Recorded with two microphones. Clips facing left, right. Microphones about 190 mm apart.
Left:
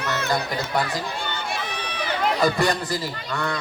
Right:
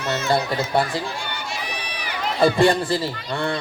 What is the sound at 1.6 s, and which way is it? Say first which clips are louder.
Run: left 2 dB; 10° right (ahead or behind).